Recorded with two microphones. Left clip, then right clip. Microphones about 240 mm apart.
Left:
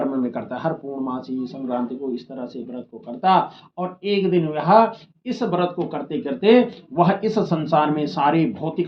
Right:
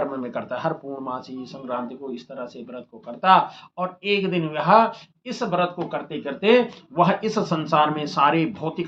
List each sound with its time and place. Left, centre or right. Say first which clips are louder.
0.0 s speech: left 2 dB; right